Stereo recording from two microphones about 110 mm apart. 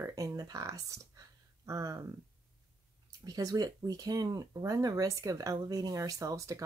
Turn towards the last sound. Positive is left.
turn(degrees=-30)  # may be behind; listen again after turning